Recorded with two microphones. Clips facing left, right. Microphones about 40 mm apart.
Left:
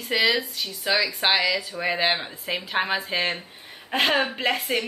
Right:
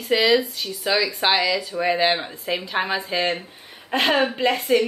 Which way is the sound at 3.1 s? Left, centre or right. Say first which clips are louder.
Right 3 dB; centre.